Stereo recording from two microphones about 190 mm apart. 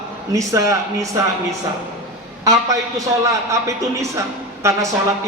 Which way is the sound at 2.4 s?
15° right (ahead or behind).